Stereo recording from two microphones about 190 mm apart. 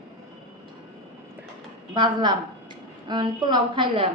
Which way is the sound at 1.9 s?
25° right (ahead or behind).